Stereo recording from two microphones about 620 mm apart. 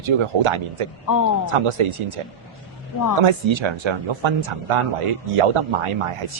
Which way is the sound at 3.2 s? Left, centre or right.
Right.